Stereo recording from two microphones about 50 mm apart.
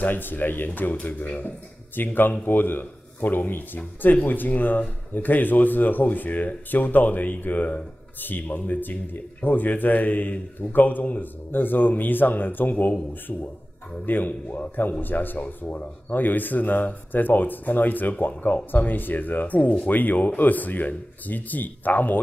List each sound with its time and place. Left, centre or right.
0.0 s a man's voice: left
13.3 s a man's voice: left